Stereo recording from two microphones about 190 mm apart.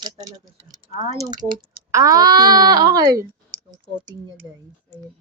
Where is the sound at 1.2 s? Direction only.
20° right (ahead or behind).